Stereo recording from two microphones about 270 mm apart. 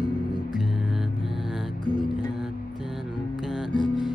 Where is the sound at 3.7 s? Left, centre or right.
Centre.